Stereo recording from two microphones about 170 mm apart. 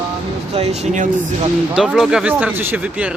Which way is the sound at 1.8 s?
Centre (ahead or behind).